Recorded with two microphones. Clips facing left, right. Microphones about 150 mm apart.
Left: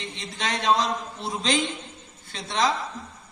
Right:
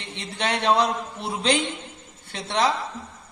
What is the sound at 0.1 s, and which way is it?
A man's voice, 60° right (ahead or behind).